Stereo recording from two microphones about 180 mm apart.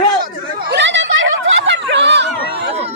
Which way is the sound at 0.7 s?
85° right.